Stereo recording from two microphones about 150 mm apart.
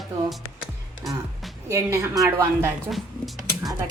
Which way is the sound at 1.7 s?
20° right (ahead or behind).